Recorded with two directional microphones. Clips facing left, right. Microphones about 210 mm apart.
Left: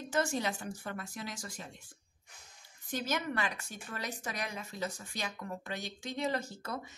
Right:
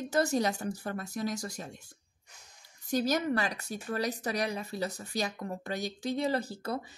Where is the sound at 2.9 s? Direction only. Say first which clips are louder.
Right 7 dB; 40° right (ahead or behind).